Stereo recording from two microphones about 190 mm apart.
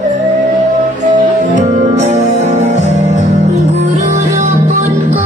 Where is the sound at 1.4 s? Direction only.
40° right (ahead or behind).